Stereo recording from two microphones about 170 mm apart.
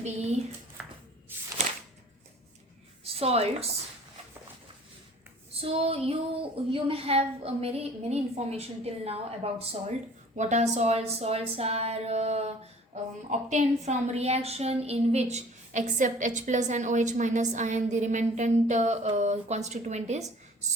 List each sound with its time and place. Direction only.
0.0 s a woman's voice: 40° right (ahead or behind)
1.3 s a sound: 10° right (ahead or behind)
3.0 s a woman's voice: 35° right (ahead or behind)
5.5 s a woman's voice: 35° right (ahead or behind)